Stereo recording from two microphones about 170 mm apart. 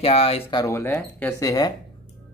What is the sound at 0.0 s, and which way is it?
Speech, 35° left (ahead or behind).